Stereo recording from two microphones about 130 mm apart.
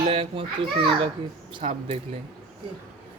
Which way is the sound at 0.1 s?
45° right (ahead or behind).